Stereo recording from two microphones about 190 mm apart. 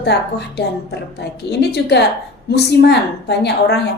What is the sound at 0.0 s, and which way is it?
A woman's voice, 60° left (ahead or behind).